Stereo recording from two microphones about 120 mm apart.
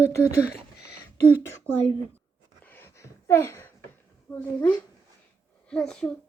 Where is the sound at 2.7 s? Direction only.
20° left (ahead or behind).